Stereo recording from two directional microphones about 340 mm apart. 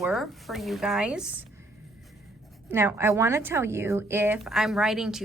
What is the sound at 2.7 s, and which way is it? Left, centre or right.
A woman's voice, centre.